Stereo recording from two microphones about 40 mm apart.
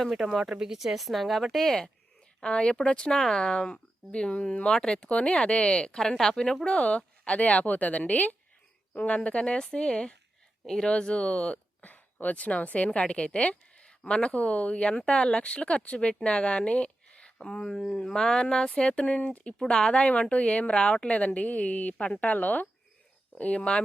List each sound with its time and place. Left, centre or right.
0.2 s speech: centre
2.4 s a woman's voice: left
5.0 s a woman's voice: left
6.7 s a woman's voice: left
17.3 s speech: centre
19.0 s a woman's voice: left
19.5 s a woman's voice: left
23.3 s a woman's voice: left